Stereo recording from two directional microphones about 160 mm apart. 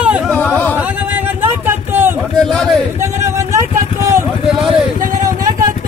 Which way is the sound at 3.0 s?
15° right (ahead or behind).